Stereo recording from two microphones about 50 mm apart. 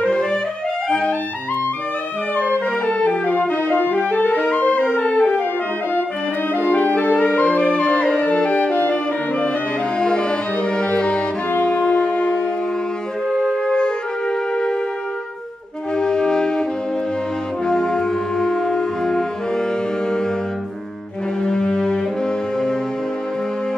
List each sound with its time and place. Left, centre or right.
0.0 s clarinet: centre
0.8 s music: centre
2.9 s music: left
4.4 s music: centre
6.6 s music: left
16.0 s music: centre
17.6 s music: centre
21.4 s music: centre